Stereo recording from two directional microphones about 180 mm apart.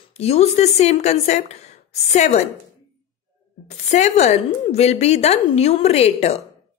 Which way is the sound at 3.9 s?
40° left (ahead or behind).